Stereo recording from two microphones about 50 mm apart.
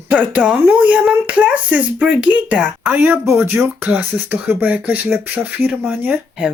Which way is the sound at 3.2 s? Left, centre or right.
Right.